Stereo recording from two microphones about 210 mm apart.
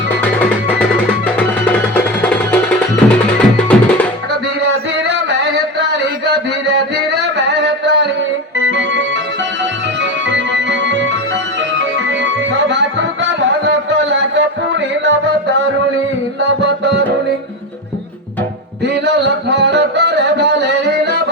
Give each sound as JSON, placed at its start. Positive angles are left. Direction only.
{"t": 0.2, "sound": "music", "side_deg": 5}
{"t": 2.2, "sound": "music", "side_deg": 5}
{"t": 6.2, "sound": "music", "side_deg": -55}
{"t": 16.6, "sound": "music", "side_deg": -55}
{"t": 19.0, "sound": "music", "side_deg": -55}